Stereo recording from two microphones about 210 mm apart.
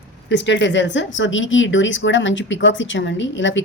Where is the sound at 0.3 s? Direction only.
60° left (ahead or behind).